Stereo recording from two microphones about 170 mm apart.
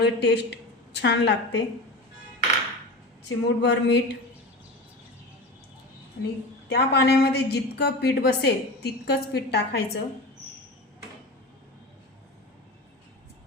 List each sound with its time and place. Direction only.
0.0 s speech: 80° left
0.9 s a woman's voice: 90° left
3.2 s speech: 90° left
6.2 s a woman's voice: 70° left (ahead or behind)